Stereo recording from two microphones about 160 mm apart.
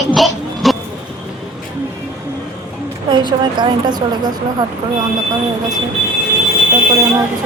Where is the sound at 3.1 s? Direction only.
30° right (ahead or behind).